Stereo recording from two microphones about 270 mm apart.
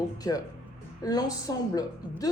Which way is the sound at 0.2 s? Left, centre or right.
Centre.